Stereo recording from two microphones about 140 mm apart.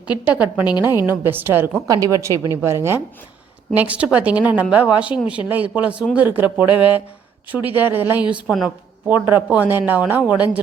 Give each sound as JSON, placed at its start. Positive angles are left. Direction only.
{"t": 0.3, "sound": "a woman's voice", "side_deg": -10}